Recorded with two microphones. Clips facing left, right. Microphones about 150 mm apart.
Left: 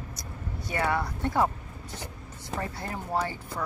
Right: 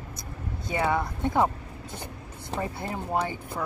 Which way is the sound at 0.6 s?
20° right (ahead or behind).